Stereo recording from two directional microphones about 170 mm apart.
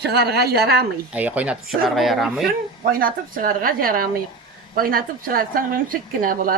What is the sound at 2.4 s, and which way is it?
A woman's voice, 60° right (ahead or behind).